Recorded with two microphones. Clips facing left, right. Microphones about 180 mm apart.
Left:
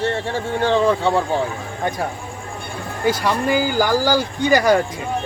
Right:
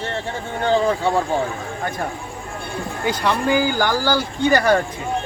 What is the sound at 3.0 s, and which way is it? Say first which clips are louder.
Speech: left 1 dB; 10° left (ahead or behind).